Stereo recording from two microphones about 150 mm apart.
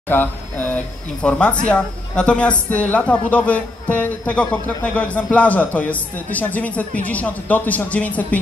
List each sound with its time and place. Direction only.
0.1 s speech: 15° left (ahead or behind)